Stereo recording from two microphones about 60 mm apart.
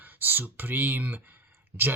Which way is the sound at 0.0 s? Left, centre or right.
Right.